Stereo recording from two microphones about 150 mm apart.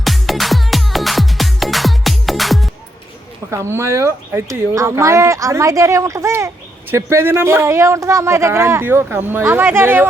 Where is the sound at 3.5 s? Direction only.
20° right (ahead or behind).